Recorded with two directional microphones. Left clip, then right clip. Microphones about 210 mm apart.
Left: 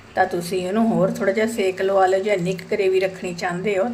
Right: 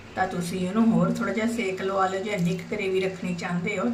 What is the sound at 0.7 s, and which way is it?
Speech, 40° left (ahead or behind).